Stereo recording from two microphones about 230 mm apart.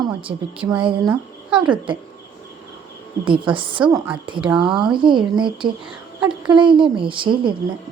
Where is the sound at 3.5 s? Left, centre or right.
Right.